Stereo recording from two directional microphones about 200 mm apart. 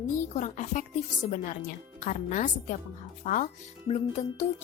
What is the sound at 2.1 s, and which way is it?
Speech, 40° left (ahead or behind).